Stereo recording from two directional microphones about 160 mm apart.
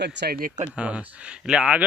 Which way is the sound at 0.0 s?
85° right.